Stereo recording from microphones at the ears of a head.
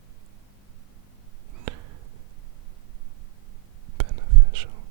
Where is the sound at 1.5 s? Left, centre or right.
Right.